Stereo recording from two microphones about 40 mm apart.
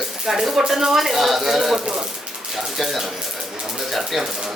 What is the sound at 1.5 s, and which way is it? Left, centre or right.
Speech, centre.